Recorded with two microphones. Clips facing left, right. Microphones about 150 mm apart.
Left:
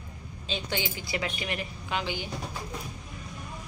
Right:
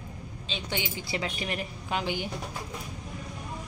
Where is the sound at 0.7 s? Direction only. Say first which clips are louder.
Right 1 dB; 25° right (ahead or behind); by 2.3 s 50° right (ahead or behind).